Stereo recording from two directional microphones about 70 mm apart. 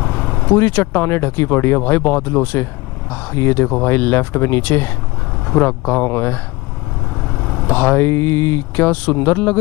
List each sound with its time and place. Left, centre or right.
0.0 s vehicle: left
0.5 s speech: left
3.3 s speech: left
7.2 s vehicle: centre
7.6 s speech: left